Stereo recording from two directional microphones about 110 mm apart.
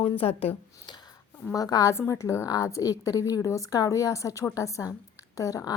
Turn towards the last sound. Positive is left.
turn(degrees=35)  # may be behind; listen again after turning